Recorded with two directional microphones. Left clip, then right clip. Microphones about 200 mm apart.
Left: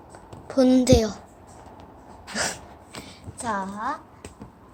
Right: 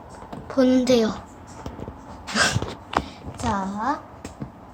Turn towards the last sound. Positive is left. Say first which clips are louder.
# right 3 dB
turn(degrees=20)  # may be behind; listen again after turning